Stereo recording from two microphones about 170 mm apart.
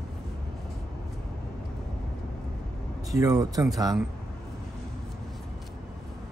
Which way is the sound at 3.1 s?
20° right (ahead or behind).